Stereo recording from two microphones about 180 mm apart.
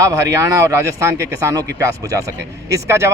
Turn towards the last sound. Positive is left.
turn(degrees=-15)  # may be behind; listen again after turning